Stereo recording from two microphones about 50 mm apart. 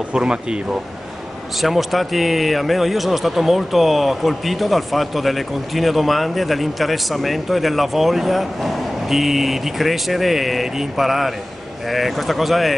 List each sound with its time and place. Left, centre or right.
0.1 s speech: centre
1.6 s speech: centre